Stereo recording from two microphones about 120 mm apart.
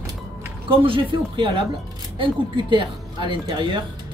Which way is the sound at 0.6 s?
45° right (ahead or behind).